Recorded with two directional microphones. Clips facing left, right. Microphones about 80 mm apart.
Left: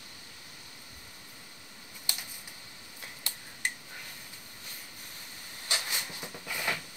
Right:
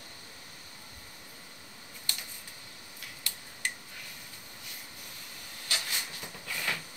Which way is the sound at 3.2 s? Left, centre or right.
Left.